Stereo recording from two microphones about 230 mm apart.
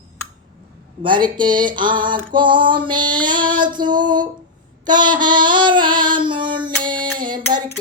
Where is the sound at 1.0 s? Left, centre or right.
Centre.